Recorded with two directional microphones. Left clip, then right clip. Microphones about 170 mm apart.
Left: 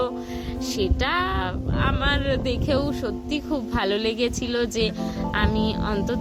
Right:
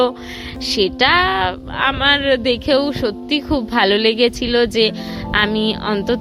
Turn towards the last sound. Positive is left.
turn(degrees=-45)  # may be behind; listen again after turning